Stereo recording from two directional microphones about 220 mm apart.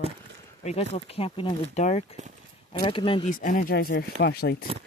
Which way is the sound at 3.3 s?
35° left (ahead or behind).